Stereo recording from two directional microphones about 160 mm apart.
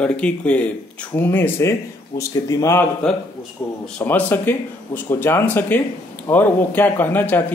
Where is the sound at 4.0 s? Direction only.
10° left (ahead or behind).